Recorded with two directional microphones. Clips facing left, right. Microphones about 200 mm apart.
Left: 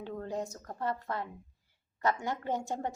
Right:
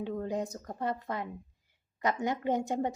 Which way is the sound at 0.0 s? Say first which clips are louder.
Right 3 dB; 15° right (ahead or behind).